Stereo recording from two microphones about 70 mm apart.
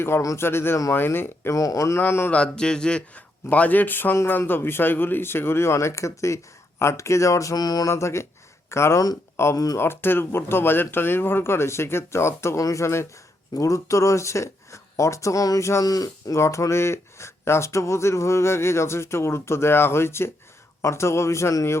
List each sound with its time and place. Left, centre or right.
0.3 s speech: left
1.5 s speech: left
2.0 s speech: left
2.3 s a man's voice: centre; by 7.5 s left
7.5 s a sound: left
7.9 s speech: left
15.8 s speech: left
16.4 s speech: left